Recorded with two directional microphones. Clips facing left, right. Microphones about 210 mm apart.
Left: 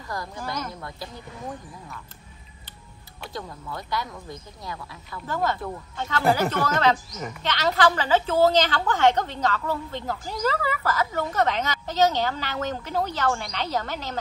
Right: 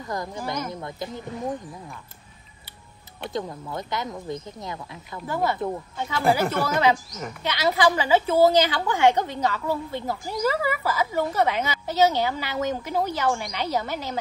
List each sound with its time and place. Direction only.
0.1 s speech: 20° right (ahead or behind)
3.3 s speech: 20° right (ahead or behind)
5.3 s a woman's voice: 10° right (ahead or behind)